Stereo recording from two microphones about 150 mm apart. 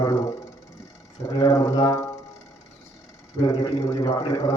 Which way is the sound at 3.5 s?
25° left (ahead or behind).